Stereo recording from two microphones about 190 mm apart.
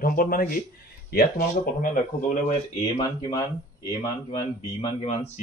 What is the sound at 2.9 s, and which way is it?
Speech, 25° left (ahead or behind).